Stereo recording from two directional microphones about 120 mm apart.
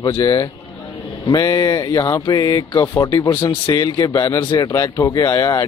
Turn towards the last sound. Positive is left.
turn(degrees=30)  # may be behind; listen again after turning